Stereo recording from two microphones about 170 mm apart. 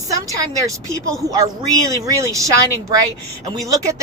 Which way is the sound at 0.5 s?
20° right (ahead or behind).